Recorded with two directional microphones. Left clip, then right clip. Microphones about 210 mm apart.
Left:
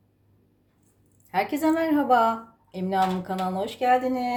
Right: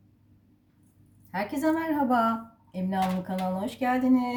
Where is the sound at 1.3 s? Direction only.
40° left (ahead or behind).